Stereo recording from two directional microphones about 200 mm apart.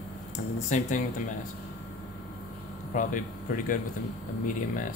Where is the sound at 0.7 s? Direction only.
40° left (ahead or behind).